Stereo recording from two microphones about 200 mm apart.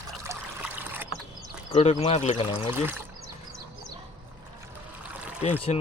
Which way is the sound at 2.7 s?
10° right (ahead or behind).